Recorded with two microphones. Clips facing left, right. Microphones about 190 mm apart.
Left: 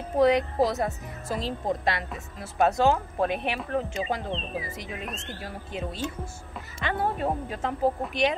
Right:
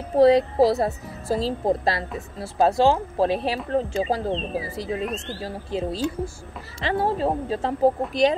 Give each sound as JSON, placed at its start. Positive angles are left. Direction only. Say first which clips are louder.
{"t": 0.2, "sound": "a woman's voice", "louder": "right 6 dB", "side_deg": -30}